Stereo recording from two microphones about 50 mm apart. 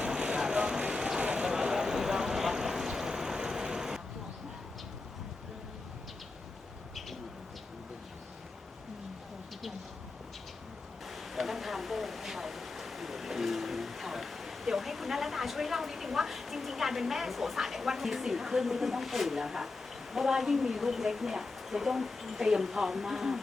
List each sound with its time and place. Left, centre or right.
0.1 s vehicle: centre
11.0 s a sound: centre
20.1 s speech: centre